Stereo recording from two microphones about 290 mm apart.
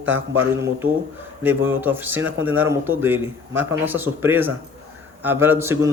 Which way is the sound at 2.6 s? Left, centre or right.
Centre.